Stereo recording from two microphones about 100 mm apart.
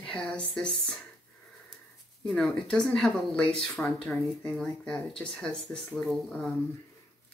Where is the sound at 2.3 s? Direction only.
5° left (ahead or behind).